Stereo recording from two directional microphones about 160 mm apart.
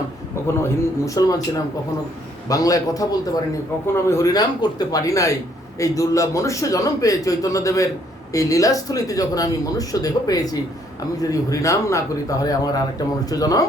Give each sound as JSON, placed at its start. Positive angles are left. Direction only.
{"t": 0.4, "sound": "speech", "side_deg": 20}